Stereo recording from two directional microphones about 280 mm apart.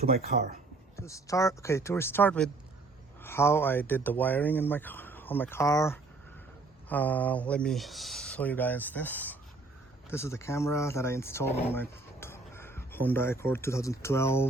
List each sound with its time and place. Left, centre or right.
0.3 s speech: right
0.9 s speech: centre